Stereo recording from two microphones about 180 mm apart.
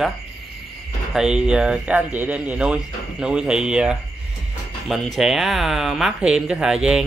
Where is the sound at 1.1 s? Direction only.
5° right (ahead or behind).